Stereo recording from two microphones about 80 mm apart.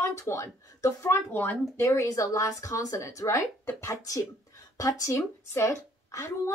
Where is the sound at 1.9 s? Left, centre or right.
Left.